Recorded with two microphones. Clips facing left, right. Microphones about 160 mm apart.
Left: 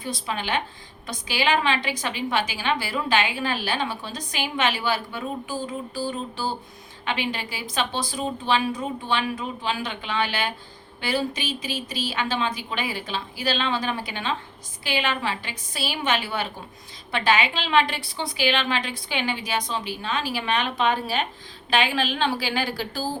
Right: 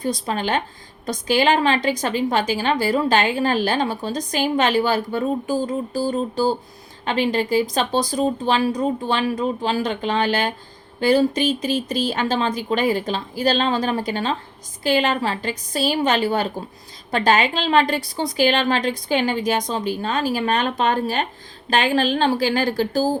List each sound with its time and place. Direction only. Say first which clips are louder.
0.0 s a woman's voice: right 6 dB; 40° right (ahead or behind)